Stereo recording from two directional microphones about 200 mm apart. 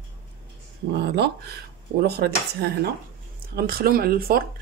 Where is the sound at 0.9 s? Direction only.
55° right (ahead or behind).